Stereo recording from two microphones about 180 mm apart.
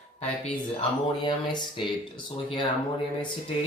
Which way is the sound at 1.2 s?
25° left (ahead or behind).